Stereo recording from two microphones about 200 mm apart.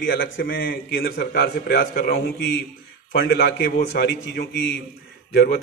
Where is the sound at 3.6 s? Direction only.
50° left (ahead or behind).